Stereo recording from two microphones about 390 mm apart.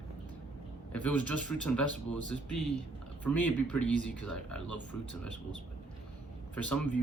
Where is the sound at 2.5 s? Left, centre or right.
Left.